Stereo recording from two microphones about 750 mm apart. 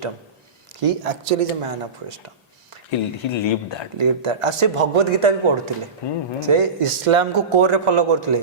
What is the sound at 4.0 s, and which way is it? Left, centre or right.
Speech, right.